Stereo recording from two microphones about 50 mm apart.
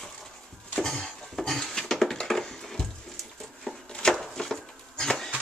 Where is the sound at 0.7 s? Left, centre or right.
Centre.